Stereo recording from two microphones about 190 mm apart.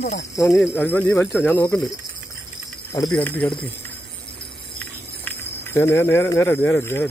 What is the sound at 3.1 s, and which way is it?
Speech, 10° left (ahead or behind).